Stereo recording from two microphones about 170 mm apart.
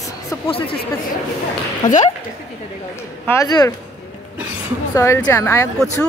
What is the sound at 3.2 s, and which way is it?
Speech, 20° left (ahead or behind).